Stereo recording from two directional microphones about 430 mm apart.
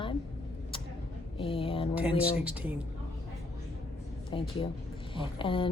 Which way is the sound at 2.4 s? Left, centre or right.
Centre.